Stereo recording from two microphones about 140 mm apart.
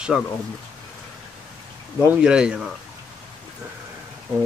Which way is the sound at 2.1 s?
5° right (ahead or behind).